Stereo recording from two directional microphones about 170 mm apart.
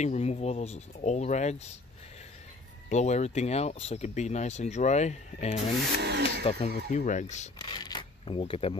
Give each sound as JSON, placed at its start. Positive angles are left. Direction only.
{"t": 0.0, "sound": "speech", "side_deg": 40}
{"t": 2.9, "sound": "speech", "side_deg": 40}
{"t": 5.9, "sound": "speech", "side_deg": -75}
{"t": 6.4, "sound": "speech", "side_deg": 40}
{"t": 7.5, "sound": "zipper", "side_deg": 25}